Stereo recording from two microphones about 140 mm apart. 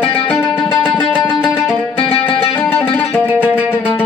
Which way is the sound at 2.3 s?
40° left (ahead or behind).